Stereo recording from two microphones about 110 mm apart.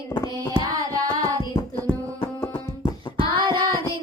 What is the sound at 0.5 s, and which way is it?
Child singing, 35° right (ahead or behind).